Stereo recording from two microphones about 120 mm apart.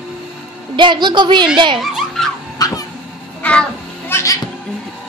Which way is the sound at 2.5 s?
30° left (ahead or behind).